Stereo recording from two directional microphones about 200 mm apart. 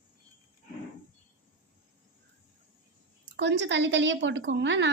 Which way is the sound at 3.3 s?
60° right (ahead or behind).